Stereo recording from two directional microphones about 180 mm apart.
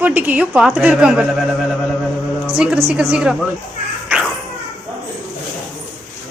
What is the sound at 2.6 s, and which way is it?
Speech, centre (ahead or behind).